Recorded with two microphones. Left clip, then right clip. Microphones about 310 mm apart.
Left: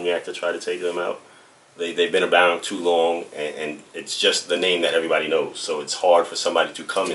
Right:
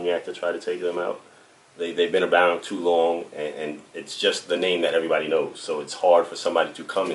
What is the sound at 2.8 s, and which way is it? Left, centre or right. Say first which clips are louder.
Speech: even; right.